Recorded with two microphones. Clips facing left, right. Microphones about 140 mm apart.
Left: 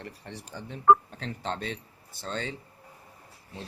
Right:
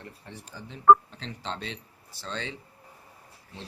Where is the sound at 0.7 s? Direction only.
50° left (ahead or behind).